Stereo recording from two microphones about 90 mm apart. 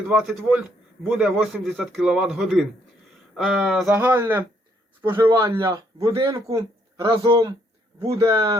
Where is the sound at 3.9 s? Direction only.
20° right (ahead or behind).